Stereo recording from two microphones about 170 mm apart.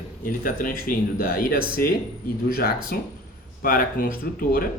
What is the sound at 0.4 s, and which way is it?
Speech, 55° left (ahead or behind).